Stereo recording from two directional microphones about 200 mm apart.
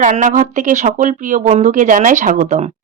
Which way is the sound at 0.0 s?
40° right (ahead or behind).